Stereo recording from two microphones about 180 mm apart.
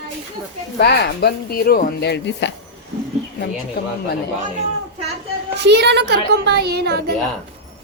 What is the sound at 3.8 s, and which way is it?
Speech, 65° left (ahead or behind).